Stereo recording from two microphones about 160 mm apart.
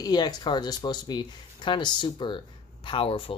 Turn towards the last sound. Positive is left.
turn(degrees=35)  # may be behind; listen again after turning